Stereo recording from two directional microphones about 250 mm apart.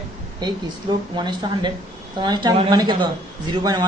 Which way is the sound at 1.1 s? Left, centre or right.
Centre.